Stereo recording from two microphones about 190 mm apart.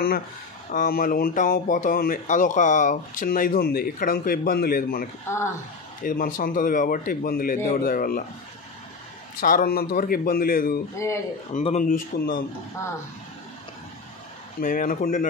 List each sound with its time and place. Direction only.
0.7 s speech: 50° left (ahead or behind)
5.3 s speech: 15° left (ahead or behind)
6.0 s speech: 45° left (ahead or behind)
9.4 s speech: 45° left (ahead or behind)
14.6 s speech: 45° left (ahead or behind)